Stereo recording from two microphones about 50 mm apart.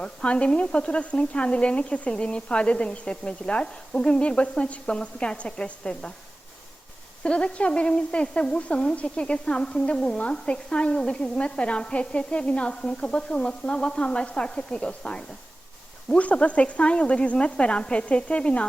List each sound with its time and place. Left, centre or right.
0.0 s speech: left
7.2 s speech: left